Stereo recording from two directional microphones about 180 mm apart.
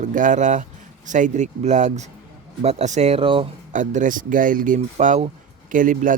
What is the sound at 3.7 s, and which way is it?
Speech, 45° right (ahead or behind).